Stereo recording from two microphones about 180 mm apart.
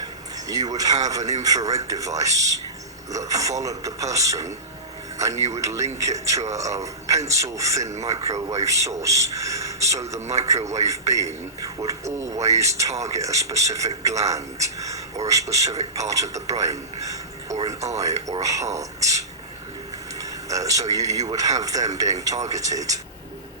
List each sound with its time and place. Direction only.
0.0 s a man's voice: 20° right (ahead or behind)
7.9 s a man's voice: 40° right (ahead or behind)
8.1 s a man's voice: 20° right (ahead or behind)
10.6 s a man's voice: 40° right (ahead or behind)
10.8 s a man's voice: 15° right (ahead or behind)
20.5 s speech: 20° right (ahead or behind)